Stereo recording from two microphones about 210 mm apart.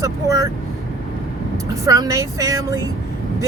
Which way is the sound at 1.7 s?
15° right (ahead or behind).